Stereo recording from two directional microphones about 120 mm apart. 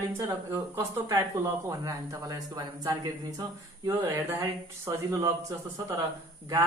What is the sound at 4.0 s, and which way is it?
Speech, 20° right (ahead or behind).